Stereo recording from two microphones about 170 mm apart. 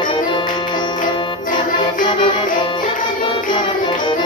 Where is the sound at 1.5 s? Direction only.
50° left (ahead or behind).